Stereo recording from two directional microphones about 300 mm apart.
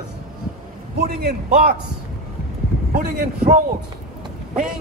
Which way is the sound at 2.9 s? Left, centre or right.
Right.